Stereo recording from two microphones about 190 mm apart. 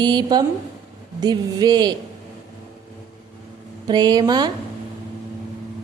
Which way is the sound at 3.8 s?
20° right (ahead or behind).